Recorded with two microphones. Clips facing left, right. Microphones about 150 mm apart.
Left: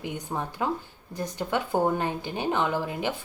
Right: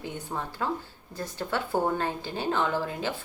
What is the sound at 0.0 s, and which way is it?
A woman's voice, 15° left (ahead or behind).